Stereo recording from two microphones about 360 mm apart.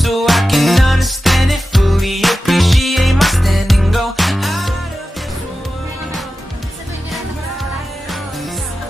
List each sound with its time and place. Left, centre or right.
0.0 s music: centre